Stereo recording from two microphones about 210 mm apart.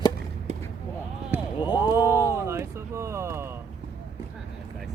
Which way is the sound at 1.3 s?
10° right (ahead or behind).